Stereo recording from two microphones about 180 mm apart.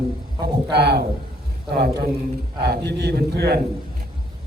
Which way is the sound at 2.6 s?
65° right (ahead or behind).